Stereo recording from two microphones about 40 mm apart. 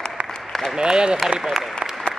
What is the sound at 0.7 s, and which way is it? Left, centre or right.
Speech, centre.